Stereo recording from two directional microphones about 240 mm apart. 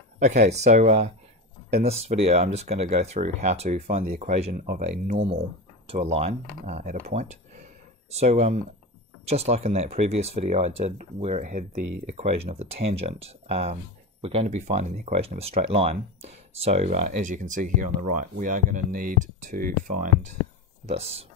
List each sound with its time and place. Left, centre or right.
0.2 s speech: right